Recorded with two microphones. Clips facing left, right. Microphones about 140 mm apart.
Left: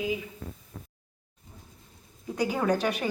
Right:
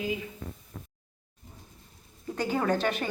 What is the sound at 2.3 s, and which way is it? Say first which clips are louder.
Speech: left 1 dB; 10° left (ahead or behind).